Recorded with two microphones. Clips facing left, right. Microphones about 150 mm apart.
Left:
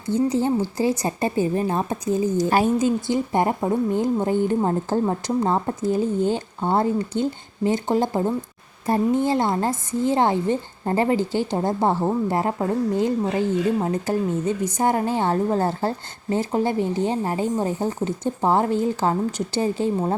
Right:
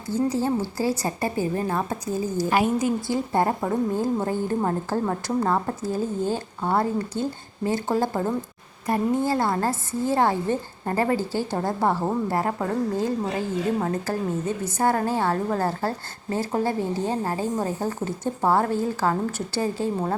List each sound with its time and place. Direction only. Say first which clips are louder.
0.1 s a woman's voice: left 3 dB; 20° left (ahead or behind)